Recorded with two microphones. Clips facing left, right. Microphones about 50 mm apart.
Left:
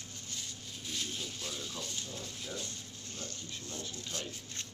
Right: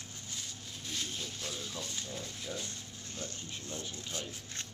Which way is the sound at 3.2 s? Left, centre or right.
Centre.